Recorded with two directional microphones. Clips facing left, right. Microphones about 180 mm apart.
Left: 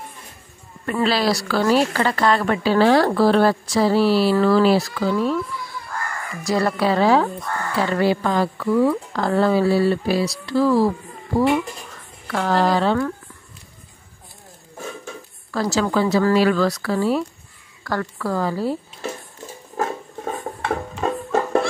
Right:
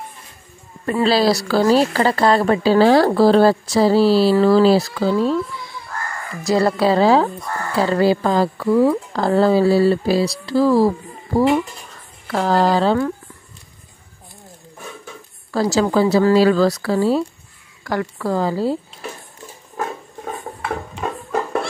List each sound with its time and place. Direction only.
1.0 s speech: 30° right (ahead or behind)
6.4 s a woman's voice: 30° right (ahead or behind)
12.3 s speech: 35° right (ahead or behind)
15.5 s speech: 30° right (ahead or behind)
17.8 s a woman's voice: 15° right (ahead or behind)
18.3 s a woman's voice: 25° right (ahead or behind)
20.6 s a sound: 30° left (ahead or behind)